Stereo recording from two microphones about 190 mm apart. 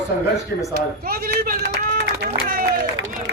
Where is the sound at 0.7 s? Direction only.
50° right (ahead or behind).